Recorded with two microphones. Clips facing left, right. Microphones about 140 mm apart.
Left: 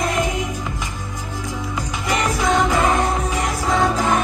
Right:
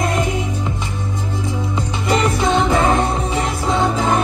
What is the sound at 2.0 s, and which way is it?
Music, 30° right (ahead or behind).